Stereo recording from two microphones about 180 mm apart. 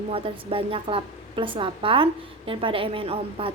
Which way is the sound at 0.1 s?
30° right (ahead or behind).